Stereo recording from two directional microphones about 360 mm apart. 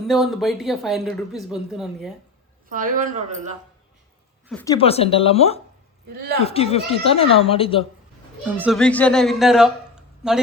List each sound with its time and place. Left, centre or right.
0.1 s a woman's voice: centre
2.6 s speech: right
4.4 s speech: centre
6.1 s speech: right
6.4 s speech: centre
8.4 s a woman's voice: centre